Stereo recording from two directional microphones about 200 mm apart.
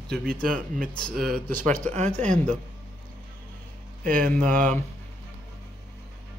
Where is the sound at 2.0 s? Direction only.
35° right (ahead or behind).